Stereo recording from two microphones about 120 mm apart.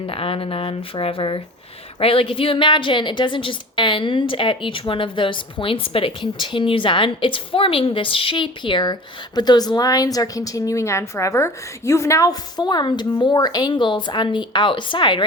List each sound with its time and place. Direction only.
0.1 s a woman's voice: 50° left (ahead or behind)